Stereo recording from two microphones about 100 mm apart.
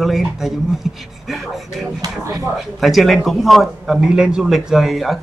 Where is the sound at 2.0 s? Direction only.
35° right (ahead or behind).